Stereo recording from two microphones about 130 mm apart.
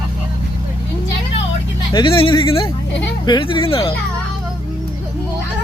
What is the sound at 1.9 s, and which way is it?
Speech, 40° left (ahead or behind).